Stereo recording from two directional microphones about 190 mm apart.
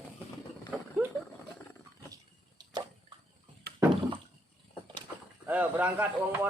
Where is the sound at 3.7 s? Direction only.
55° right (ahead or behind).